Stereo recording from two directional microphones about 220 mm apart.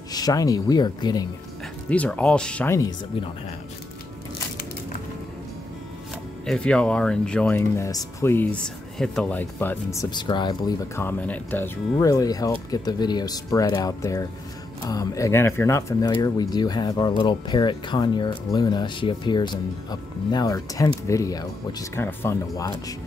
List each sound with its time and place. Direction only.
0.1 s speech: 15° left (ahead or behind)
1.9 s speech: 5° left (ahead or behind)
6.4 s speech: 5° left (ahead or behind)